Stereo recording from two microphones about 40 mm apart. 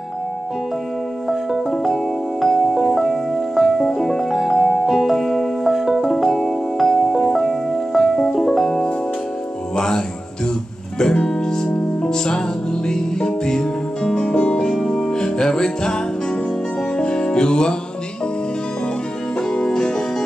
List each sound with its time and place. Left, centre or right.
1.7 s music: centre
4.6 s music: centre
5.7 s music: centre
9.8 s music: centre
14.7 s music: centre
19.5 s music: centre